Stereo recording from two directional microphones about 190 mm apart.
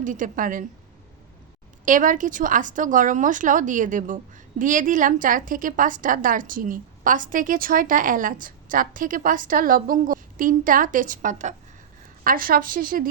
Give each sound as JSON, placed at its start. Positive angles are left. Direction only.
{"t": 0.0, "sound": "speech", "side_deg": -45}
{"t": 1.8, "sound": "speech", "side_deg": -45}